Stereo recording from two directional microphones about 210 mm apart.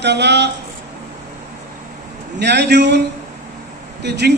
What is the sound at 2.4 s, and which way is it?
Speech, 55° right (ahead or behind).